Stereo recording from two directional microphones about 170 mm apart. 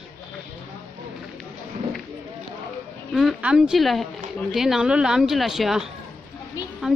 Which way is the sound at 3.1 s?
Centre (ahead or behind).